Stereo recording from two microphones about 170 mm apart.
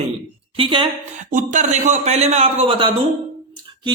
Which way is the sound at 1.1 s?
45° right (ahead or behind).